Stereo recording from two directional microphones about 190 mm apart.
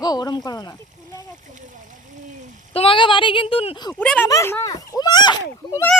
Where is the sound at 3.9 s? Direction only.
10° left (ahead or behind).